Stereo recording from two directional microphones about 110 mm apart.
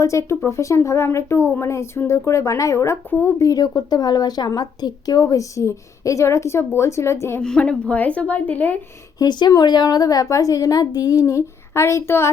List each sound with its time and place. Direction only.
0.0 s speech: 25° left (ahead or behind)
7.4 s a woman's voice: 5° left (ahead or behind)
9.1 s a woman's voice: 35° left (ahead or behind)